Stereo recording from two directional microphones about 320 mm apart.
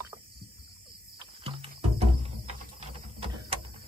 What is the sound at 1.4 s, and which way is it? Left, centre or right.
Music, centre.